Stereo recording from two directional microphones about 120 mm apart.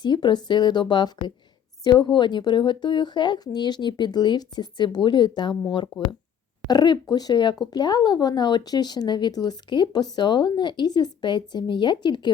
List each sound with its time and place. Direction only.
0.0 s speech: 40° left (ahead or behind)
6.7 s speech: 35° left (ahead or behind)